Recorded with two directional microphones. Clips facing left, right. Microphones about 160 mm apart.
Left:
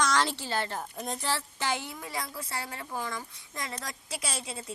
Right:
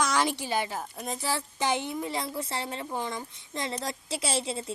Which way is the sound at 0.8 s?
Centre (ahead or behind).